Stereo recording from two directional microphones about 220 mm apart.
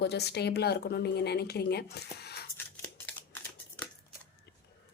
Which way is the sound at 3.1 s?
5° left (ahead or behind).